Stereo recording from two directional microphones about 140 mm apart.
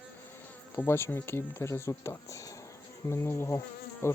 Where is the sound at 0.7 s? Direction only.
15° left (ahead or behind).